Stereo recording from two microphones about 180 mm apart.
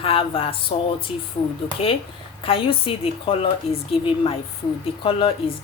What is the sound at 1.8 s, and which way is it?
A woman's voice, 35° left (ahead or behind).